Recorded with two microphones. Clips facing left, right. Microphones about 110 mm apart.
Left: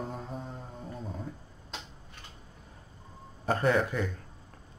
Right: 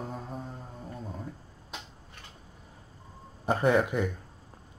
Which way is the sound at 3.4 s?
15° right (ahead or behind).